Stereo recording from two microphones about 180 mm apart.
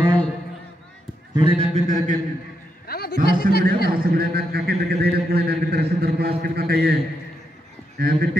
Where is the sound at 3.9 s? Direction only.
55° right (ahead or behind).